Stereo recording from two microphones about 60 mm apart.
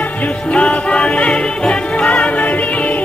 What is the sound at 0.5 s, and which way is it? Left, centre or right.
Music, centre.